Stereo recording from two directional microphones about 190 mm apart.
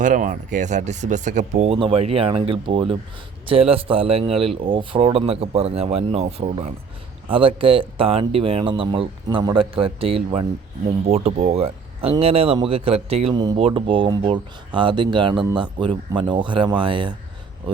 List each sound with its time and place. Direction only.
0.0 s a man's voice: 45° right (ahead or behind); by 17.2 s 25° right (ahead or behind)